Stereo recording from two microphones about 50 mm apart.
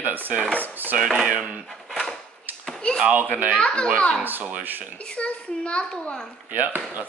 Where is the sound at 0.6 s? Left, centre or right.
Right.